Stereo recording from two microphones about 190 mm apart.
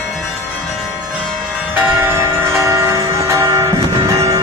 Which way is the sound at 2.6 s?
15° right (ahead or behind).